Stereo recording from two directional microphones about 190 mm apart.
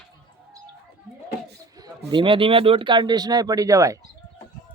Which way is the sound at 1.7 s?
25° right (ahead or behind).